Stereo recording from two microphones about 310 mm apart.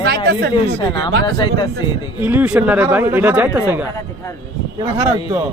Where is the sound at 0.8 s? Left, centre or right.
Centre.